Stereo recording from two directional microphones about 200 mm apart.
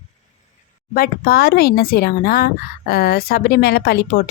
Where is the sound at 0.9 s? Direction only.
50° left (ahead or behind).